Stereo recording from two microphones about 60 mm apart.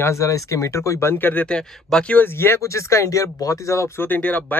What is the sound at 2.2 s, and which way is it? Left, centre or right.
Speech, left.